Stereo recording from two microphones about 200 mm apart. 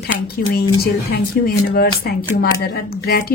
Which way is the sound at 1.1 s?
50° left (ahead or behind).